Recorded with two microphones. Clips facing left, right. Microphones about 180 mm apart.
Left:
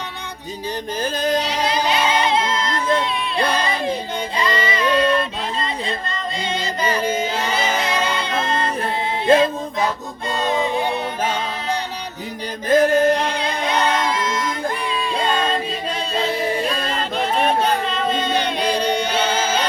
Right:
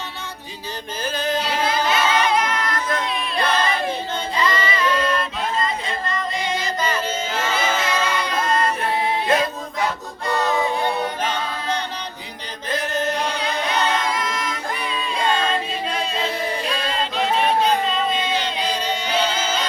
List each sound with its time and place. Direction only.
1.1 s a sound: 40° left (ahead or behind)
1.4 s child singing: 20° left (ahead or behind)
5.6 s music: 25° left (ahead or behind)
7.8 s music: 30° left (ahead or behind)
11.2 s music: 10° left (ahead or behind)
12.6 s music: 50° left (ahead or behind)
16.8 s music: 50° left (ahead or behind)
18.1 s chant: 55° left (ahead or behind)
19.0 s music: 60° left (ahead or behind)